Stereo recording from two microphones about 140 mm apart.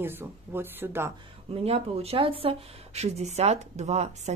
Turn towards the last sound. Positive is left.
turn(degrees=-50)  # may be behind; listen again after turning